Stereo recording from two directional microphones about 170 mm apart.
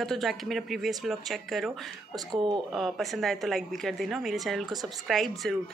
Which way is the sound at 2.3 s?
25° right (ahead or behind).